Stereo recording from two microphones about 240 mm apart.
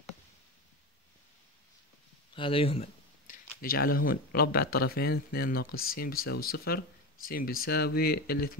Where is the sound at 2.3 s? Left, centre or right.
Left.